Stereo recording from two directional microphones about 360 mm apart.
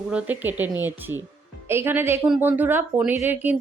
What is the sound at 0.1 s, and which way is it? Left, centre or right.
A woman's voice, centre.